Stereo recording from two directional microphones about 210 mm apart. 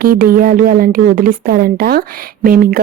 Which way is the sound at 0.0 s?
45° right (ahead or behind).